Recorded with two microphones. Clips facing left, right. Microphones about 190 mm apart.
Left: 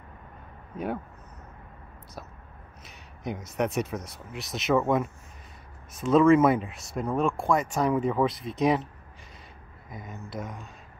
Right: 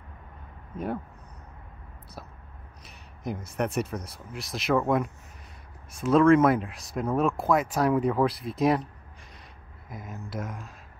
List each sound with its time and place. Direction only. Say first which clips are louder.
3.5 s speech: left 1 dB; centre (ahead or behind)
9.8 s speech: right 1 dB; centre (ahead or behind)